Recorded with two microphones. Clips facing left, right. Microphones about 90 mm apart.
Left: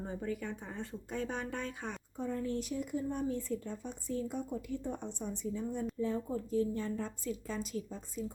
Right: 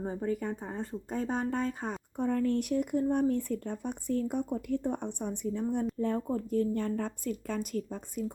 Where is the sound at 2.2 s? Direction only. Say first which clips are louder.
Right 7 dB; 65° right (ahead or behind).